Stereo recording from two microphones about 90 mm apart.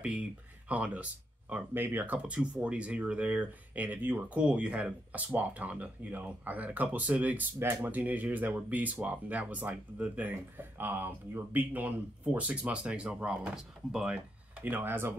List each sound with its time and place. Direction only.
0.7 s speech: 15° right (ahead or behind)
14.6 s speech: 20° right (ahead or behind)